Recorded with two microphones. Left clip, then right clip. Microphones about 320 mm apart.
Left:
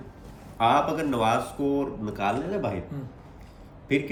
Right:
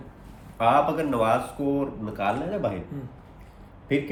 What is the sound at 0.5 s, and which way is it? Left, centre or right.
Speech, centre.